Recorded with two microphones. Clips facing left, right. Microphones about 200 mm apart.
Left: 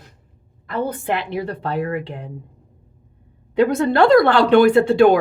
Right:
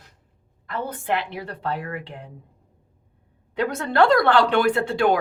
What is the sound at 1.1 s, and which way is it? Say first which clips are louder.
Speech: left 4 dB; 15° left (ahead or behind).